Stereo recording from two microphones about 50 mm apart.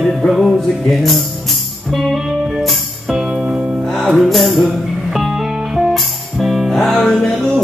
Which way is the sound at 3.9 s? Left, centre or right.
Centre.